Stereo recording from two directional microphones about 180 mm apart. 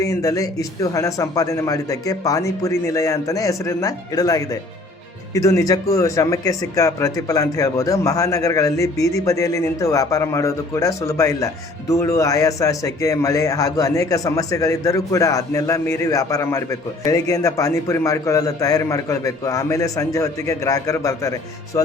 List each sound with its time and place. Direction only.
0.0 s speech: 20° left (ahead or behind)
21.7 s music: 15° left (ahead or behind)